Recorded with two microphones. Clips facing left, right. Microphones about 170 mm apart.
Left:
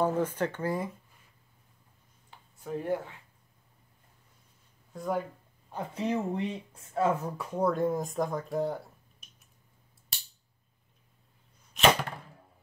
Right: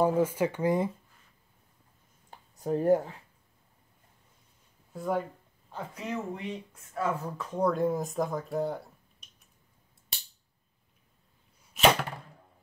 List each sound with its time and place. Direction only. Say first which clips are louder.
0.0 s speech: right 3 dB; 10° right (ahead or behind)
2.3 s a sound: right 6 dB; 40° right (ahead or behind)
4.9 s speech: right 1 dB; centre (ahead or behind)
5.9 s speech: left 6 dB; 30° left (ahead or behind)
7.3 s speech: even; 10° left (ahead or behind)
11.7 s arrow: right 1 dB; 5° right (ahead or behind)